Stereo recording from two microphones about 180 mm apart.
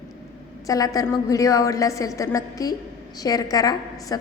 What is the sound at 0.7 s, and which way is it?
A woman's voice, 20° left (ahead or behind).